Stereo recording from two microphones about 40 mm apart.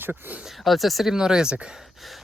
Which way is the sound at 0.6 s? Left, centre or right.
Centre.